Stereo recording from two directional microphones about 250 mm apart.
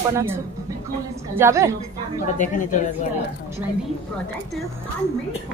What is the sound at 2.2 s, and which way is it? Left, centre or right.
Speech, left.